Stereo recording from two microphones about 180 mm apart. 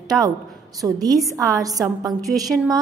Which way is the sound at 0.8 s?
20° right (ahead or behind).